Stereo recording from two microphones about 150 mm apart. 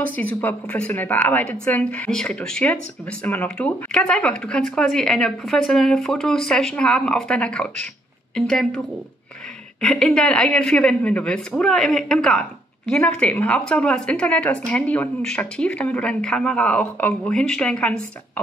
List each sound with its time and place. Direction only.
0.0 s a woman's voice: 10° left (ahead or behind)